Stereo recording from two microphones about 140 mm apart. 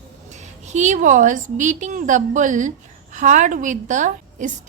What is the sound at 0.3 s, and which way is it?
A woman's voice, 55° right (ahead or behind).